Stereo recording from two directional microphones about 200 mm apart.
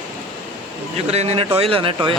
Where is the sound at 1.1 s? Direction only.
30° right (ahead or behind).